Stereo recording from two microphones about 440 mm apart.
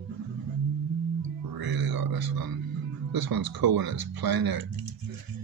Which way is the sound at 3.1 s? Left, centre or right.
Right.